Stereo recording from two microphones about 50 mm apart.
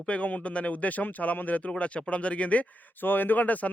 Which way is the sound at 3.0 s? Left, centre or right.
Left.